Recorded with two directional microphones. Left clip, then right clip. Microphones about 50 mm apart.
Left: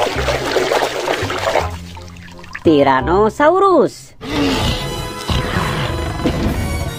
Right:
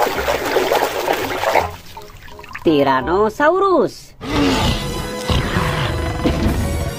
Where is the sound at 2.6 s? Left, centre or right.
Left.